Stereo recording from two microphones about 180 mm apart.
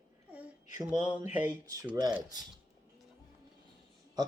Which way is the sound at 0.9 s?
40° left (ahead or behind).